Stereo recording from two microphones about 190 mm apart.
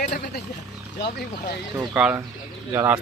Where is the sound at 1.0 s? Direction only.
60° left (ahead or behind).